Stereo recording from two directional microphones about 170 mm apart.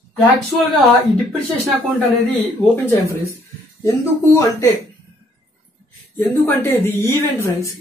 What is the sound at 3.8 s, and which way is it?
Speech, 15° left (ahead or behind).